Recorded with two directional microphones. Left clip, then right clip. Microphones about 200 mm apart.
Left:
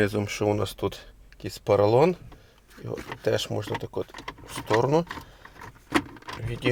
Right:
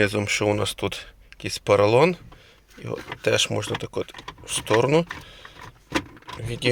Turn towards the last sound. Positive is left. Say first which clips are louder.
# right 5 dB
turn(degrees=-15)  # may be behind; listen again after turning